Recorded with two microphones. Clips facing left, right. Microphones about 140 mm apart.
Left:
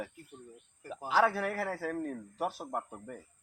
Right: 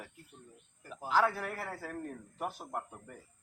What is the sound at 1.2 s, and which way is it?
Speech, 85° left.